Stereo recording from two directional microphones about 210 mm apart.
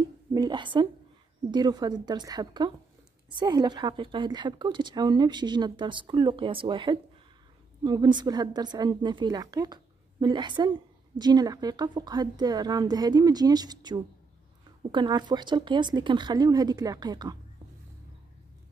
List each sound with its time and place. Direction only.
0.3 s a woman's voice: 20° right (ahead or behind)